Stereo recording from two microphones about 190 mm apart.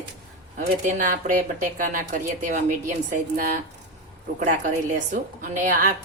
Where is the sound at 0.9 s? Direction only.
40° right (ahead or behind).